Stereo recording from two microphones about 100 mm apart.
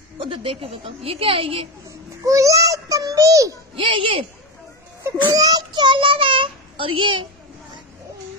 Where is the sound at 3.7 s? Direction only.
60° right (ahead or behind).